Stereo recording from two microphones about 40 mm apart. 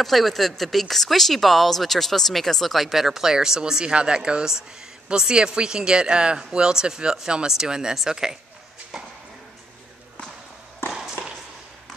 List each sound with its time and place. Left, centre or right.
0.0 s speech: centre
8.9 s a sound: centre
10.8 s walk: left